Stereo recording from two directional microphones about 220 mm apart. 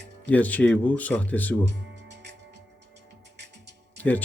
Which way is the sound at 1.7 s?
50° right (ahead or behind).